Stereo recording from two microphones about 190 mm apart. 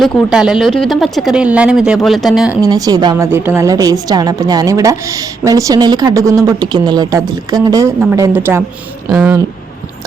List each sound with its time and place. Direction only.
0.0 s speech: 5° right (ahead or behind)
2.6 s a woman's voice: 20° right (ahead or behind)